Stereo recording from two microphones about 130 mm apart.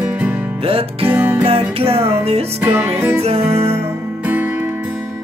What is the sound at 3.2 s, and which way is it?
Music, 50° right (ahead or behind).